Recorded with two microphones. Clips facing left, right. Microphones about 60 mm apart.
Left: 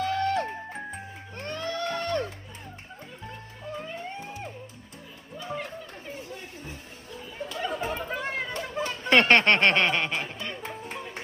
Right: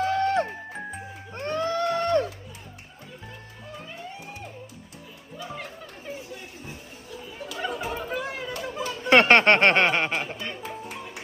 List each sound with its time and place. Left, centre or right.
0.0 s music: right
3.9 s music: left
6.3 s chatter: left
7.3 s a sound: left
7.7 s chatter: left
9.0 s speech: right
10.6 s music: left